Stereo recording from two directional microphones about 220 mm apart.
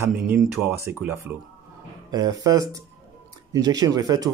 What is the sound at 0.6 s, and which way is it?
Speech, 10° right (ahead or behind).